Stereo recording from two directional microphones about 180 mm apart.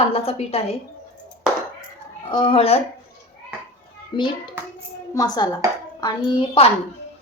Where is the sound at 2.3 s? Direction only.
30° left (ahead or behind).